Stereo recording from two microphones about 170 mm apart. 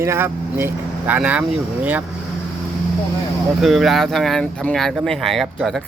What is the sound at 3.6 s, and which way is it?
Speech, centre (ahead or behind).